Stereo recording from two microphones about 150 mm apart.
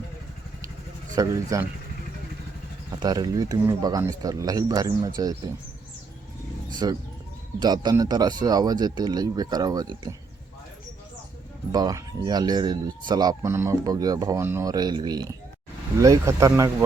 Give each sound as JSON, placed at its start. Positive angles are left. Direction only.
{"t": 1.1, "sound": "speech", "side_deg": -20}
{"t": 2.9, "sound": "speech", "side_deg": -25}
{"t": 6.8, "sound": "speech", "side_deg": -25}
{"t": 11.7, "sound": "speech", "side_deg": -25}